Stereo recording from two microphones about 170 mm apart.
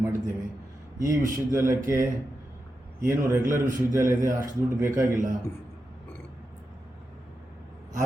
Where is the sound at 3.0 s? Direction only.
15° right (ahead or behind).